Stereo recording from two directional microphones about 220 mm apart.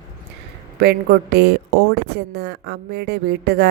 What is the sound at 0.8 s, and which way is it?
Speech, 50° right (ahead or behind).